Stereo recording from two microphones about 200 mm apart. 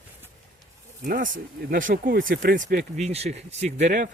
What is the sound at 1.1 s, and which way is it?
Speech, 40° right (ahead or behind).